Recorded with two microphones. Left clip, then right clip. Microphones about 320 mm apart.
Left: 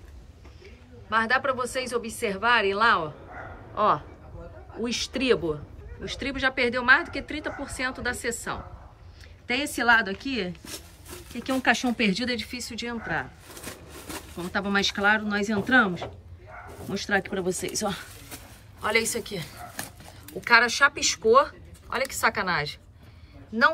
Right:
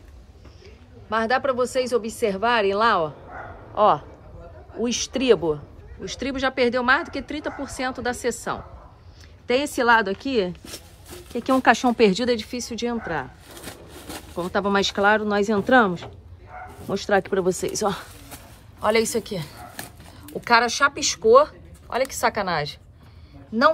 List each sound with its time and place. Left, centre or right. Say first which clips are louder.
1.1 s speech: right 2 dB; centre
5.1 s speech: right 6 dB; centre
14.3 s speech: right 5 dB; centre